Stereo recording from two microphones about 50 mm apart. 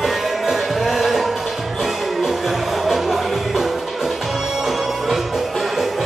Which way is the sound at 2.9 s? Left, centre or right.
Centre.